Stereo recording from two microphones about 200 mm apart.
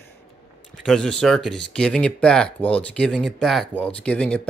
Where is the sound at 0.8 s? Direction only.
5° left (ahead or behind).